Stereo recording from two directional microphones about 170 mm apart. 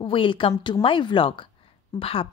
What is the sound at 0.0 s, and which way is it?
A woman's voice, 30° left (ahead or behind).